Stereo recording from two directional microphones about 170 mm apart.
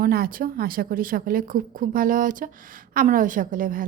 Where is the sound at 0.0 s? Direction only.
60° right (ahead or behind).